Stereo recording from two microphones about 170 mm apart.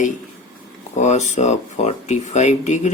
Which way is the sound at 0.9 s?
45° left (ahead or behind).